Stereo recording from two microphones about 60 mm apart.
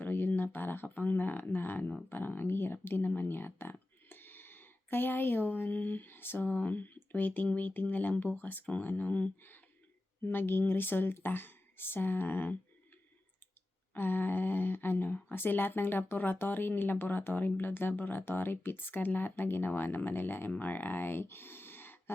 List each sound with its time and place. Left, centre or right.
0.0 s speech: left
13.9 s speech: left